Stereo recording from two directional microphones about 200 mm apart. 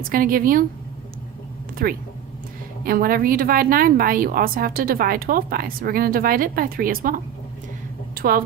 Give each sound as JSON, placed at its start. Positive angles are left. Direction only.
{"t": 0.0, "sound": "a woman's voice", "side_deg": -45}
{"t": 1.7, "sound": "a woman's voice", "side_deg": -45}
{"t": 8.1, "sound": "a sound", "side_deg": -45}